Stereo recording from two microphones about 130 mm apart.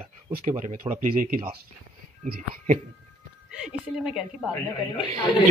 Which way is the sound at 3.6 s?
5° right (ahead or behind).